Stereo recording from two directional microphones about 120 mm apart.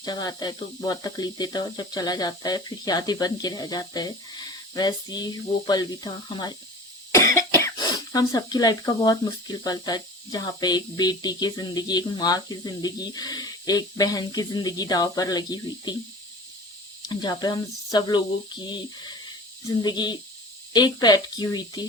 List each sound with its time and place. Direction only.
0.0 s speech: 35° left (ahead or behind)
7.1 s cough: 25° left (ahead or behind)
7.8 s speech: 35° left (ahead or behind)
17.1 s speech: 35° left (ahead or behind)